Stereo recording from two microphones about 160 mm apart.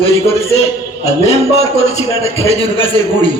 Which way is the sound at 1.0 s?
40° left (ahead or behind).